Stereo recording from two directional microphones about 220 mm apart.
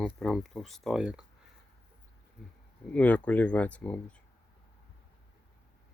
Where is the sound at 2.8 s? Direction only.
5° left (ahead or behind).